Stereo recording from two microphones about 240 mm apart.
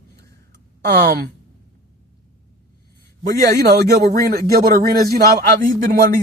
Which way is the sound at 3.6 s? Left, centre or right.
Right.